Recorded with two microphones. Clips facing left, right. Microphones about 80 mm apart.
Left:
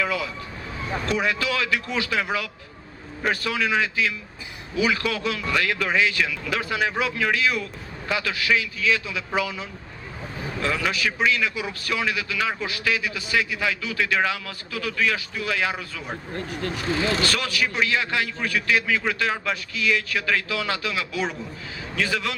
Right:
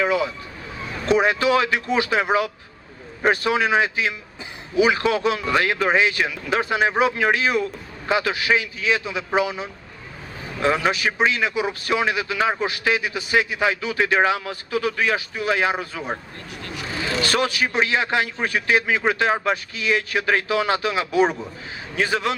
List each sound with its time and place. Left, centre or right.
0.0 s a man's voice: right
16.5 s speech: left
17.2 s a man's voice: right